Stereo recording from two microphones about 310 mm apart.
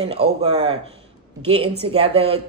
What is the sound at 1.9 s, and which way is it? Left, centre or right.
Speech, centre.